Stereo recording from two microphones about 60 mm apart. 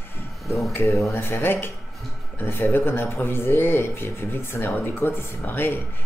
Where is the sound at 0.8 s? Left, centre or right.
Left.